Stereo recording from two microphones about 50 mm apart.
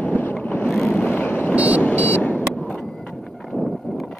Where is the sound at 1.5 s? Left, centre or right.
Right.